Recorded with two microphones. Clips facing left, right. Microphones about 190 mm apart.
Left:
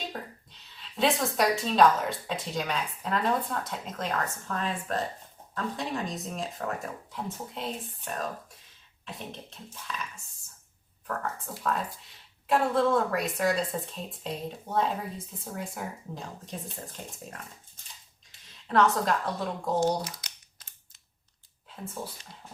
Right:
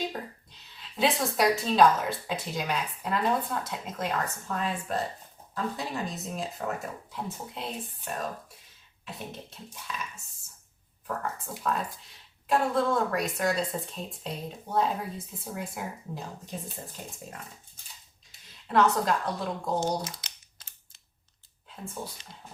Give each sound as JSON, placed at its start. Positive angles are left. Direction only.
{"t": 0.1, "sound": "a woman's voice", "side_deg": 0}
{"t": 11.0, "sound": "a woman's voice", "side_deg": -5}
{"t": 18.7, "sound": "a woman's voice", "side_deg": 0}
{"t": 19.8, "sound": "a sound", "side_deg": -30}